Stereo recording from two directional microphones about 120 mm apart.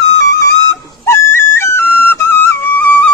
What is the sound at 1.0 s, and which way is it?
Flute, 20° left (ahead or behind).